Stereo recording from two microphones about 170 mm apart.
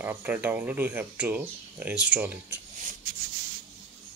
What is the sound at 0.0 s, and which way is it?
Speech, 10° right (ahead or behind).